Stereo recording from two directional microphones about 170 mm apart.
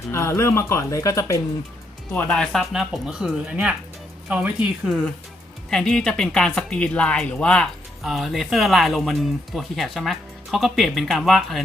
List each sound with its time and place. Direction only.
0.1 s speech: 15° left (ahead or behind)
2.1 s speech: 5° left (ahead or behind)